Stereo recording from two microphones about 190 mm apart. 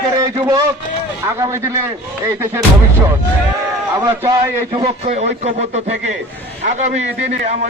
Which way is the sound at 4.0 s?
15° right (ahead or behind).